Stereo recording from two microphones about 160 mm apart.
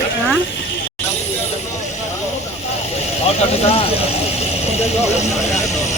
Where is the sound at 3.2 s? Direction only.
40° left (ahead or behind).